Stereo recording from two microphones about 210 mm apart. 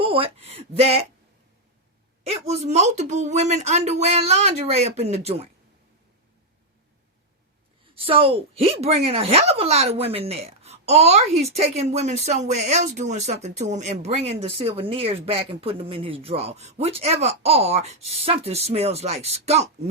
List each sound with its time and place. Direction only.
0.0 s speech: 25° right (ahead or behind)
2.2 s speech: 30° right (ahead or behind)
7.9 s speech: 25° right (ahead or behind)